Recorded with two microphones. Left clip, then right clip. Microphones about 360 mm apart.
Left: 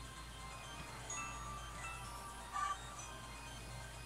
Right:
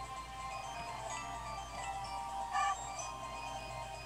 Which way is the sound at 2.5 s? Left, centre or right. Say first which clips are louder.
Right 6 dB; centre.